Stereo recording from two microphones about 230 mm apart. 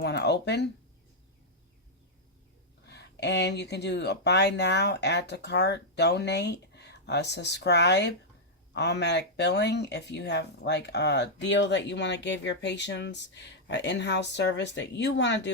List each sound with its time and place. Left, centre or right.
0.0 s speech: left
2.8 s speech: left